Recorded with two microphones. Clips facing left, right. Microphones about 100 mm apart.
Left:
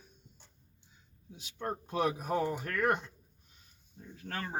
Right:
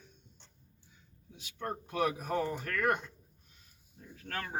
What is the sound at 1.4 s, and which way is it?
Speech, 25° left (ahead or behind).